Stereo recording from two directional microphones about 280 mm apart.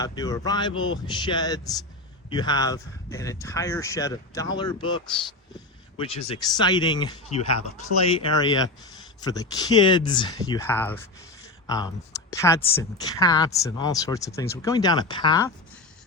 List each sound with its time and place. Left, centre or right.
0.0 s speech: centre